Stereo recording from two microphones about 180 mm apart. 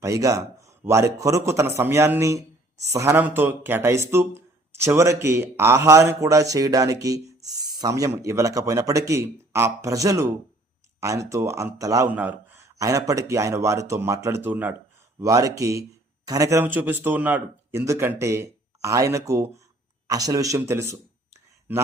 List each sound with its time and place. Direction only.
0.0 s speech: 15° right (ahead or behind)